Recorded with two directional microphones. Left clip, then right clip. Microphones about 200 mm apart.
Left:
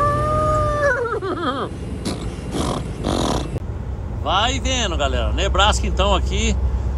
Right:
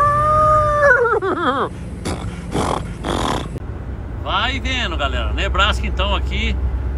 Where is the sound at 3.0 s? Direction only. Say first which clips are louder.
Right 1 dB; 20° left (ahead or behind).